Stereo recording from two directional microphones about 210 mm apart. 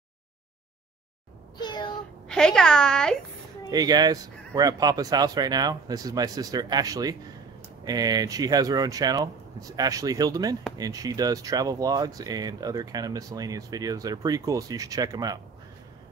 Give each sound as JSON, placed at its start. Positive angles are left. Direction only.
{"t": 1.6, "sound": "a sound", "side_deg": 20}
{"t": 2.2, "sound": "a woman's voice", "side_deg": 5}
{"t": 3.7, "sound": "speech", "side_deg": -20}